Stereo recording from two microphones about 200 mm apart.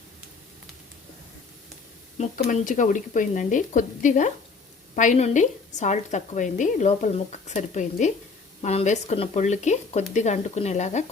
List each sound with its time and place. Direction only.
2.1 s a woman's voice: 35° left (ahead or behind)